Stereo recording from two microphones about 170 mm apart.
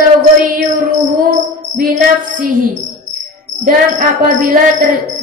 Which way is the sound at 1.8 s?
55° right (ahead or behind).